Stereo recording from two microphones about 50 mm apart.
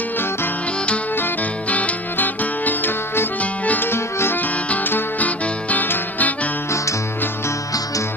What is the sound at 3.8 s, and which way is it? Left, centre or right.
Music, left.